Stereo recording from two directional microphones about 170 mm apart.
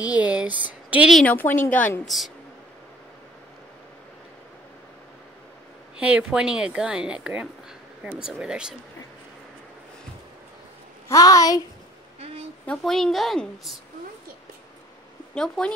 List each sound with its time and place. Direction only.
0.0 s speech: 10° right (ahead or behind)
1.2 s a woman's voice: 10° left (ahead or behind)
5.9 s a woman's voice: 5° right (ahead or behind)
11.1 s a woman's voice: 20° left (ahead or behind)
12.6 s a woman's voice: centre (ahead or behind)
15.3 s a woman's voice: 5° left (ahead or behind)